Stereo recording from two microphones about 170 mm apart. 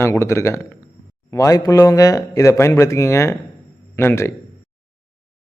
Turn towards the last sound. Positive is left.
turn(degrees=15)  # may be behind; listen again after turning